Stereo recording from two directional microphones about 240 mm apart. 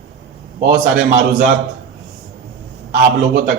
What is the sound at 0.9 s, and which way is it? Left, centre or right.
Speech, right.